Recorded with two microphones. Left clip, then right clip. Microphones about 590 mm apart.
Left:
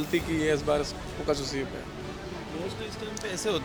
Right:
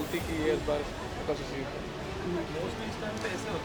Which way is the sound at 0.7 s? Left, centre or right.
Left.